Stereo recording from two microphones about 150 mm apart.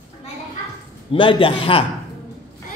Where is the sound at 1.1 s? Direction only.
35° left (ahead or behind).